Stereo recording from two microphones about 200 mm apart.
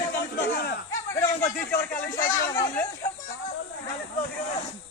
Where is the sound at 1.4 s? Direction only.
15° left (ahead or behind).